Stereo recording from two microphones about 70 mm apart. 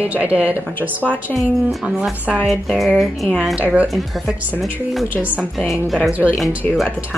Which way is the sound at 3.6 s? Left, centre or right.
Right.